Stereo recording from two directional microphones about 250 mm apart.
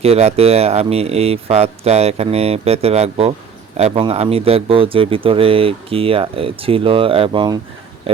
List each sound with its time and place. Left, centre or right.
0.0 s speech: right